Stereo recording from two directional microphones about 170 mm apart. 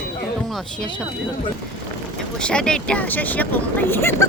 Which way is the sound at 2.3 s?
5° left (ahead or behind).